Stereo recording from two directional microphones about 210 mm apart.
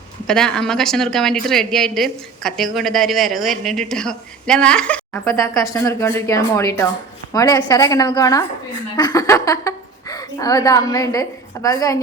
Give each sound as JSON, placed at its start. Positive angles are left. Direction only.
{"t": 0.3, "sound": "a woman's voice", "side_deg": 5}